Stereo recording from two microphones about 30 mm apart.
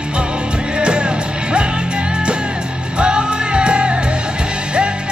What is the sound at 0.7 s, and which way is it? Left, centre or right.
Music, right.